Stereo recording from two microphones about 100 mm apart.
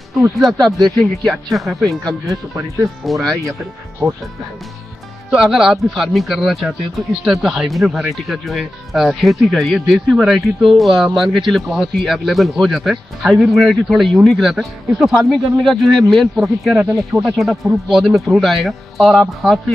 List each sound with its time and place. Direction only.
0.4 s speech: centre (ahead or behind)
2.2 s speech: 30° right (ahead or behind)
3.1 s speech: centre (ahead or behind)
5.3 s speech: 5° right (ahead or behind)